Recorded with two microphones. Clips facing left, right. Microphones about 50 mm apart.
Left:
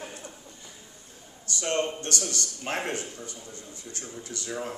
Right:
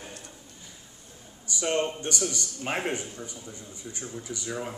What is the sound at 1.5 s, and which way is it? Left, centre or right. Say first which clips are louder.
Speech: right 1 dB; centre.